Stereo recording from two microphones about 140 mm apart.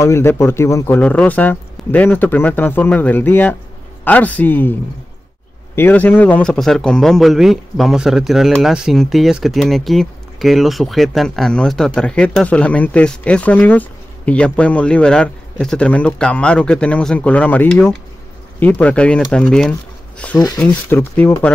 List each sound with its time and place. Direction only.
0.0 s speech: 20° left (ahead or behind)
5.8 s a man's voice: 15° left (ahead or behind)
20.3 s speech: 25° left (ahead or behind)
20.9 s speech: 15° left (ahead or behind)